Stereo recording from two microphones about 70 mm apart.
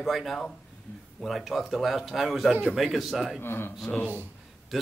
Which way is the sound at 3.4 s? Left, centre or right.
Left.